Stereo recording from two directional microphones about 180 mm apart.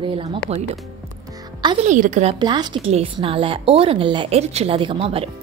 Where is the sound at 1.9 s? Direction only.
45° right (ahead or behind).